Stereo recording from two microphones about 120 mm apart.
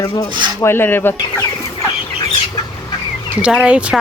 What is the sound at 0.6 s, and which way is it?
Speech, 20° left (ahead or behind).